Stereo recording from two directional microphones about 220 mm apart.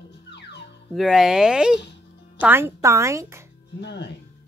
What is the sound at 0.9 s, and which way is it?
Speech, centre (ahead or behind).